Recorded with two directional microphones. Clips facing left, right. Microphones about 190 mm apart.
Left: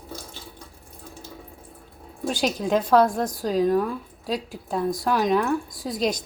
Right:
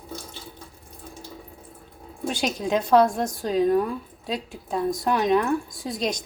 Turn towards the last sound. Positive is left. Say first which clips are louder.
# left 2 dB
turn(degrees=0)  # may be behind; listen again after turning